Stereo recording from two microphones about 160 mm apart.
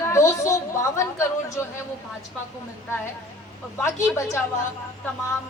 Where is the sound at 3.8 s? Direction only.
15° left (ahead or behind).